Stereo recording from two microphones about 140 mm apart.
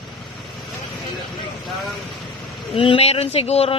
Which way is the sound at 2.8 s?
40° left (ahead or behind).